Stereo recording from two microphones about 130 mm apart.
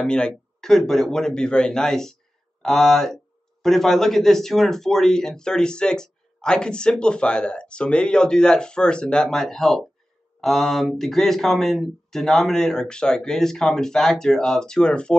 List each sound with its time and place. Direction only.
0.0 s speech: 5° left (ahead or behind)